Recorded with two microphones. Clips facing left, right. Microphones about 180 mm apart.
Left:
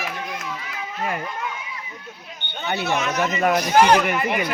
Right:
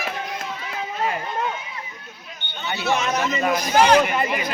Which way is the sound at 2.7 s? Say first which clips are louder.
Right 1 dB; 55° left (ahead or behind).